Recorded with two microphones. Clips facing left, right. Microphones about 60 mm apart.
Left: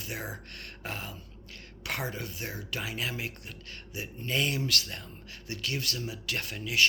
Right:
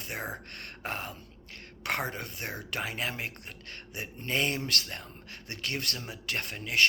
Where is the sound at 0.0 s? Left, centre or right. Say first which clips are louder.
Right 1 dB; right.